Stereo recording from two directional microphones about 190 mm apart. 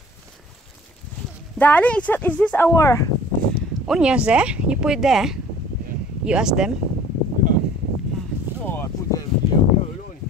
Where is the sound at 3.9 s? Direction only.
5° right (ahead or behind).